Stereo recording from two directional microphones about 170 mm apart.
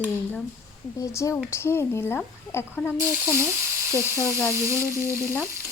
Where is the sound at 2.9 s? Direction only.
15° right (ahead or behind).